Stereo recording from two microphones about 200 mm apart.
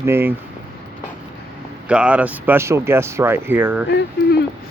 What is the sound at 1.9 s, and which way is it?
Speech, 5° right (ahead or behind).